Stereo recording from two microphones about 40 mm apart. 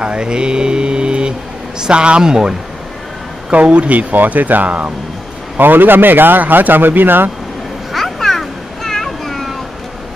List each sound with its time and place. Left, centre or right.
0.0 s mantra: right
1.8 s a man's voice: right
3.5 s speech: right
5.6 s speech: right
7.9 s a sound: centre